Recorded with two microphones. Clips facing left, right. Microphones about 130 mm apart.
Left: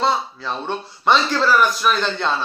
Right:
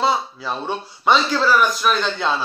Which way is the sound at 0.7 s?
Centre (ahead or behind).